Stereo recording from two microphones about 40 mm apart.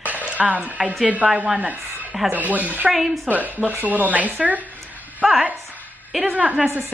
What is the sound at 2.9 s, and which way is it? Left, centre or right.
Speech, centre.